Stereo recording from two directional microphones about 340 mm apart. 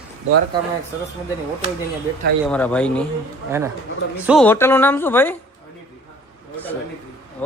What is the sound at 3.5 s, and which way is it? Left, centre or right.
Speech, centre.